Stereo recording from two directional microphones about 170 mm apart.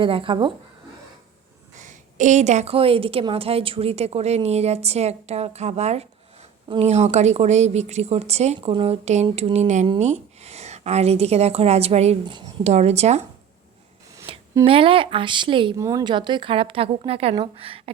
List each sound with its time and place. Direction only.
0.0 s a woman's voice: 30° right (ahead or behind)
1.8 s a woman's voice: 45° right (ahead or behind); by 12.7 s 30° right (ahead or behind)
12.7 s a woman's voice: 40° right (ahead or behind)
14.3 s a sound: 30° right (ahead or behind)
14.6 s a woman's voice: 30° right (ahead or behind)
15.8 s a woman's voice: 20° right (ahead or behind)